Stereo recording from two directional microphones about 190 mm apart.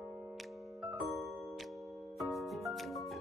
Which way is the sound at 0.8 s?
Centre (ahead or behind).